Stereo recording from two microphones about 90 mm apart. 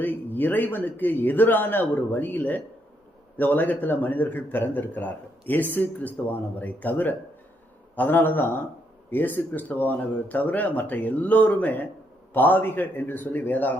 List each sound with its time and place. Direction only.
0.0 s a man's voice: 20° left (ahead or behind)